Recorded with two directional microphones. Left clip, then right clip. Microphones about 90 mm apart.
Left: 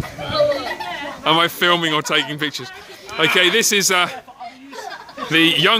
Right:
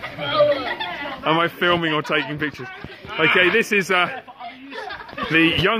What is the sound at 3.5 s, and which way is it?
Speech, 30° left (ahead or behind).